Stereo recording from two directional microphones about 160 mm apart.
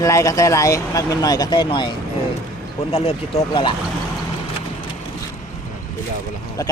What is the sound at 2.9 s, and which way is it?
Speech, 40° left (ahead or behind).